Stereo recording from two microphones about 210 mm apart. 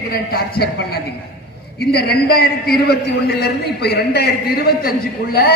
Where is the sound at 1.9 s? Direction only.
50° left (ahead or behind).